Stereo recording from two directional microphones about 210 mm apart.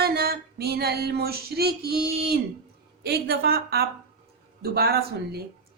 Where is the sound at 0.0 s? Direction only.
50° right (ahead or behind).